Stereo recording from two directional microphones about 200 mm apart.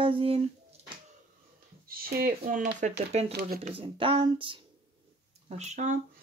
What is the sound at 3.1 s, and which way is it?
Speech, 30° right (ahead or behind).